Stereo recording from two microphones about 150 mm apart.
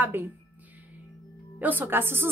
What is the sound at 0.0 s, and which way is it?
Speech, 15° right (ahead or behind).